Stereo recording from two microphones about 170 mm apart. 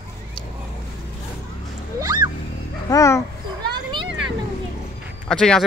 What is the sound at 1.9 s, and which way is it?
Music, 20° right (ahead or behind).